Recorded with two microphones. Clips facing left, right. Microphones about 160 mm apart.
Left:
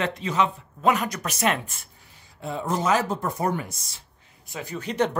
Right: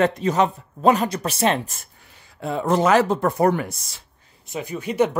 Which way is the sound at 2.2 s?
70° right (ahead or behind).